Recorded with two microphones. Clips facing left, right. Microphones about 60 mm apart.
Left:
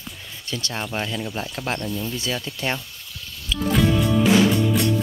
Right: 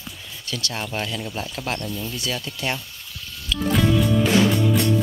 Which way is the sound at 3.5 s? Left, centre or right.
Centre.